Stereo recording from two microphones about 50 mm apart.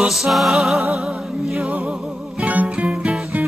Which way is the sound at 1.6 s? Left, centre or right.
Centre.